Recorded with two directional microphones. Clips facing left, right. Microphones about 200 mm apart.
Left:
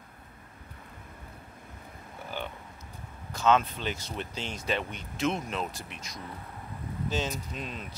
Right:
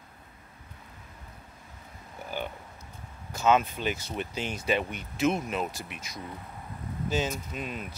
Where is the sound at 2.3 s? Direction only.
10° right (ahead or behind).